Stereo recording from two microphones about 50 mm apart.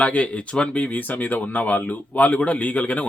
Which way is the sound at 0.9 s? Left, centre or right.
Left.